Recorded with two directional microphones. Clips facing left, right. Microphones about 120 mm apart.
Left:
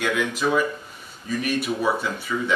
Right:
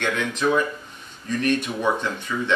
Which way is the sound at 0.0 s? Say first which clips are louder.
Even; 5° left (ahead or behind).